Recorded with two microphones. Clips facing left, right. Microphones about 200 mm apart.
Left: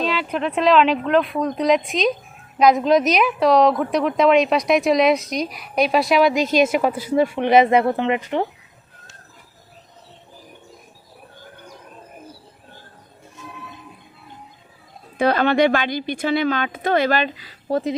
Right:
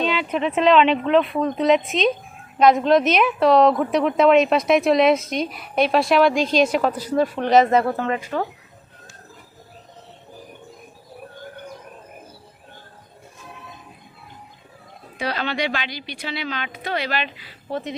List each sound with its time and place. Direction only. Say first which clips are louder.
0.0 s a woman's voice: right 1 dB; centre (ahead or behind); by 8.4 s 20° left (ahead or behind)
15.2 s speech: left 9 dB; 50° left (ahead or behind)